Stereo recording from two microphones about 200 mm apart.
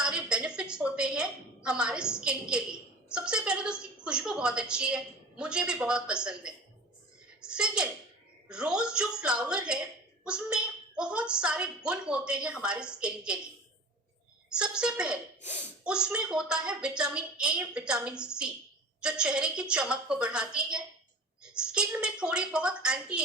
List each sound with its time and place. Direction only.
0.0 s a sound: 5° right (ahead or behind)
3.1 s a woman's voice: 5° right (ahead or behind)
14.5 s a woman's voice: 5° right (ahead or behind)
15.4 s speech: 35° left (ahead or behind)
15.8 s a woman's voice: 5° right (ahead or behind)